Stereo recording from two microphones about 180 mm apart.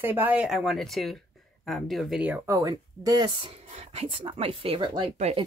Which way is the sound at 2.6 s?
20° right (ahead or behind).